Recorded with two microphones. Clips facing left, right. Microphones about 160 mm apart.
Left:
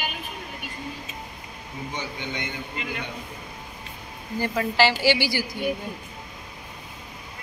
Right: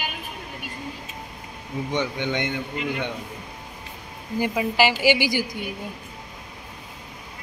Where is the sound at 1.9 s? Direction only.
75° right (ahead or behind).